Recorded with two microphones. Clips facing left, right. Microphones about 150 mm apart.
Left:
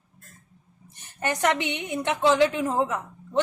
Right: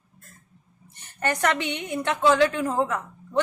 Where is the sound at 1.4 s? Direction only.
20° left (ahead or behind).